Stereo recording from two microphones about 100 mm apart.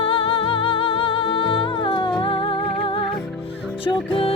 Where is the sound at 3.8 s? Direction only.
60° left (ahead or behind).